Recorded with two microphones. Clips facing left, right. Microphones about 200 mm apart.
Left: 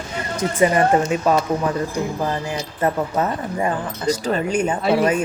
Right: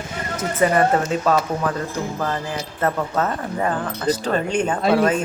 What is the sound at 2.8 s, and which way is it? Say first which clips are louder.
A woman's voice: left 1 dB; 15° left (ahead or behind).